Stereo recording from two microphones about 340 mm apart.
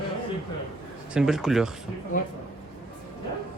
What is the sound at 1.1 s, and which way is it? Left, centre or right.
Speech, centre.